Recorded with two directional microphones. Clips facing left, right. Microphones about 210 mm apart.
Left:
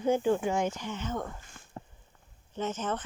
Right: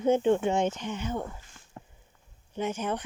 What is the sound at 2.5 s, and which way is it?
Speech, 10° right (ahead or behind).